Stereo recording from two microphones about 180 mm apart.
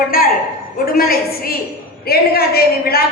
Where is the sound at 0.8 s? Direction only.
55° left (ahead or behind).